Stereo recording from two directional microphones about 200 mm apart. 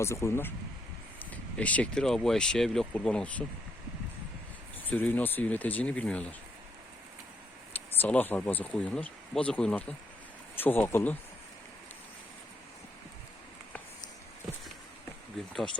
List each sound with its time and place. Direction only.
0.0 s speech: 15° left (ahead or behind)
4.9 s speech: 10° left (ahead or behind)
7.9 s speech: 10° left (ahead or behind)